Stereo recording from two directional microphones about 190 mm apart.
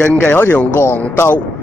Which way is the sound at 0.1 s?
10° left (ahead or behind).